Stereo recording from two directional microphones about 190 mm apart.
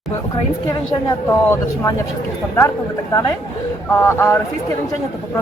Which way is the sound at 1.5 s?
15° left (ahead or behind).